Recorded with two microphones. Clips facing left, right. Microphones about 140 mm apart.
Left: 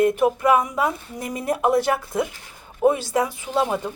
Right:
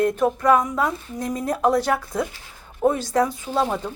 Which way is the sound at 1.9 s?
20° left (ahead or behind).